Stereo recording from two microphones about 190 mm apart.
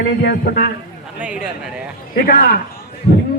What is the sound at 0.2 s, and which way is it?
Speech, 55° left (ahead or behind).